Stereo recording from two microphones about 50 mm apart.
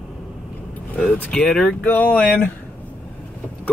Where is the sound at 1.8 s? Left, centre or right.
Left.